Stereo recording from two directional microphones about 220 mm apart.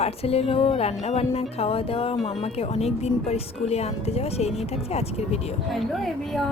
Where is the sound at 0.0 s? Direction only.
25° left (ahead or behind).